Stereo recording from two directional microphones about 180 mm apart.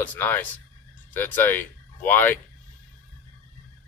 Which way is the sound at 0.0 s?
10° left (ahead or behind).